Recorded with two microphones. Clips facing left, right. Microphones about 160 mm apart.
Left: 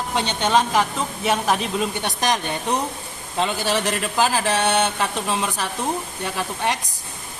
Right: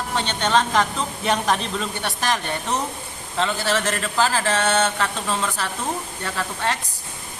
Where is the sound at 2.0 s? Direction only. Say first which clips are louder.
Left 2 dB; 20° left (ahead or behind).